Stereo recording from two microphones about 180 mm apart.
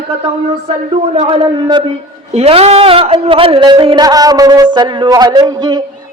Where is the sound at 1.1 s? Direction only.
30° right (ahead or behind).